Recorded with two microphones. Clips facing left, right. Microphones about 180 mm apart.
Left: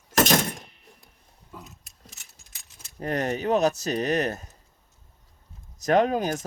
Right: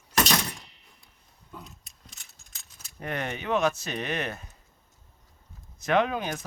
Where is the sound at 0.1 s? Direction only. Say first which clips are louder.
Left 5 dB; 50° left (ahead or behind).